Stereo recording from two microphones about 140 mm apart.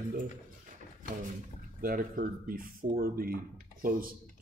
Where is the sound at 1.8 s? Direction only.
90° right.